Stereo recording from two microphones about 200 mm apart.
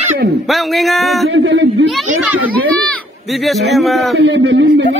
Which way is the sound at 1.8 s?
Centre (ahead or behind).